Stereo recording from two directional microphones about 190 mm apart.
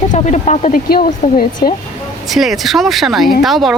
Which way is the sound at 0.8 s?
50° left (ahead or behind).